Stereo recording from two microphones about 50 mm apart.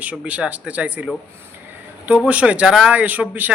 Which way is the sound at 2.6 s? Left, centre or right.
Centre.